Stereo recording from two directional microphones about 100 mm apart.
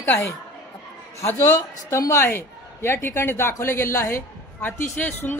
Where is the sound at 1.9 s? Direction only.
30° left (ahead or behind).